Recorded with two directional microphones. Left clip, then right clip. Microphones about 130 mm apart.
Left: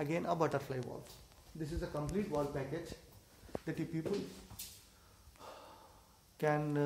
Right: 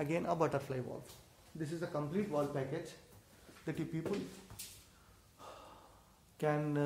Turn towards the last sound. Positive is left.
turn(degrees=0)  # may be behind; listen again after turning